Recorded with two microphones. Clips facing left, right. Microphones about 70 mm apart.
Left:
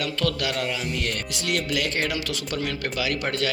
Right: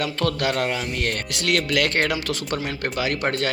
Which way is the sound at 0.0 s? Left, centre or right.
Right.